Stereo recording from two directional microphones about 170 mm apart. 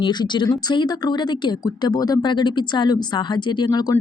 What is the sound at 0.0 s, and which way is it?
A woman's voice, 25° left (ahead or behind).